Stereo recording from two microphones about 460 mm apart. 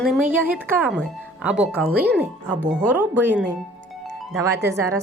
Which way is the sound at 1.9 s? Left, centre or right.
Right.